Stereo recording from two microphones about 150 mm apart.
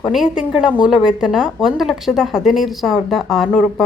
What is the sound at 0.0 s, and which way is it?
A woman's voice, 5° right (ahead or behind).